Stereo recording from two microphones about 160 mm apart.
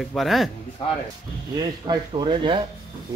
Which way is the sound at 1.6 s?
25° right (ahead or behind).